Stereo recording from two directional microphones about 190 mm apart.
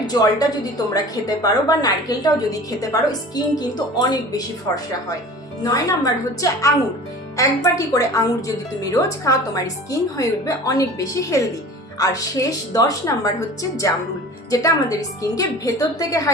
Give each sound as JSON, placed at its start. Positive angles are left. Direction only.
{"t": 0.1, "sound": "a woman's voice", "side_deg": 20}